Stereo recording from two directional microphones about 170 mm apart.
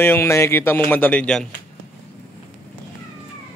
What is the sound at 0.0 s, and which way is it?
Speech, 15° left (ahead or behind).